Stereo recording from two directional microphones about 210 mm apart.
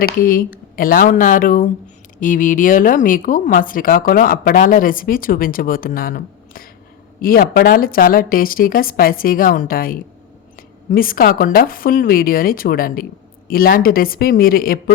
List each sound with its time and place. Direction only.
0.0 s speech: 45° left (ahead or behind)